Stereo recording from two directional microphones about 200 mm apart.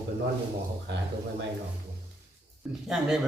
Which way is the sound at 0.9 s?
60° right (ahead or behind).